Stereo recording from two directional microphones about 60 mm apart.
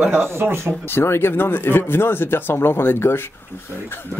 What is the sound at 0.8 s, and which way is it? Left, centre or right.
Speech, left.